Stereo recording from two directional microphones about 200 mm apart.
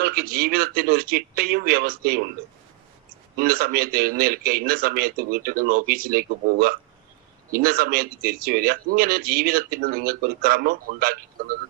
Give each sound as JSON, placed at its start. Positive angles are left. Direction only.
{"t": 0.0, "sound": "a man's voice", "side_deg": -50}
{"t": 3.3, "sound": "a man's voice", "side_deg": -45}